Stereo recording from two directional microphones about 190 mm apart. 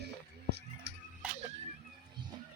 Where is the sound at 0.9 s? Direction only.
65° right (ahead or behind).